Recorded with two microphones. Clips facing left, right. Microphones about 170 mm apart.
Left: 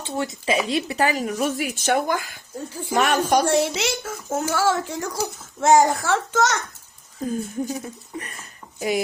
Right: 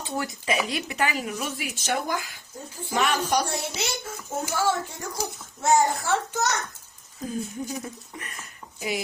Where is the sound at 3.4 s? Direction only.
90° left.